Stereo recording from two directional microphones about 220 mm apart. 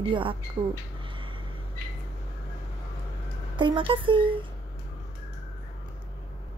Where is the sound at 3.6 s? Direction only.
20° right (ahead or behind).